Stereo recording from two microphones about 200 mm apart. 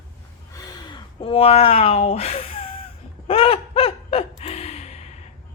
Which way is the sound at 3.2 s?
30° left (ahead or behind).